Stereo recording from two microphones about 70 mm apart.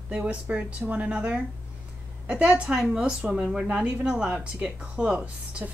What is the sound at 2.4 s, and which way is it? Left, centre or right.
A woman's voice, centre.